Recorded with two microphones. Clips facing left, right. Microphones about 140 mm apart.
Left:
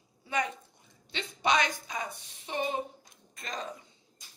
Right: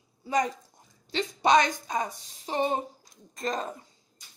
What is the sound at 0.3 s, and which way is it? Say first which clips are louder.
A woman's voice: right 5 dB; 35° right (ahead or behind).